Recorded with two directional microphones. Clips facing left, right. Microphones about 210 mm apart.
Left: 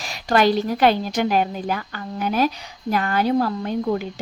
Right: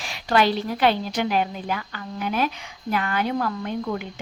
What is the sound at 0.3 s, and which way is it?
A woman's voice, 45° left (ahead or behind).